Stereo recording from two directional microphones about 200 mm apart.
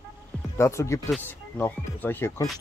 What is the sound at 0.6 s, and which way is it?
Speech, 15° left (ahead or behind).